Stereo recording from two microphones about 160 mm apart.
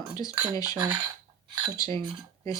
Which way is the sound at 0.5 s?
20° left (ahead or behind).